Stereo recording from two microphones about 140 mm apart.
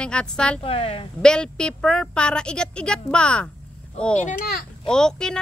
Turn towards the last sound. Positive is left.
turn(degrees=5)  # may be behind; listen again after turning